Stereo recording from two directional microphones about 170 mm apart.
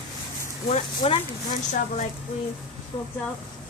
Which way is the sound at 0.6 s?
40° left (ahead or behind).